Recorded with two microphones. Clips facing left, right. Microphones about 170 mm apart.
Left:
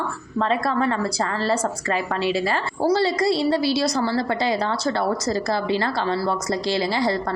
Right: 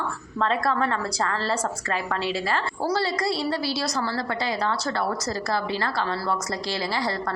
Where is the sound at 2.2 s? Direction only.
15° left (ahead or behind).